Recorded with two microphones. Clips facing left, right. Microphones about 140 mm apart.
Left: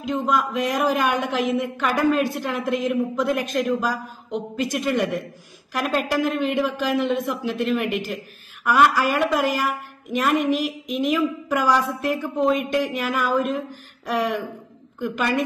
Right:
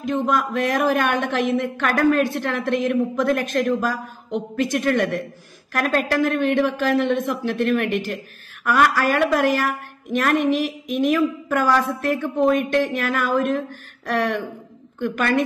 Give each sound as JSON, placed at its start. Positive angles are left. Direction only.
{"t": 0.0, "sound": "speech", "side_deg": 0}
{"t": 10.4, "sound": "speech", "side_deg": -50}
{"t": 11.0, "sound": "a woman's voice", "side_deg": 0}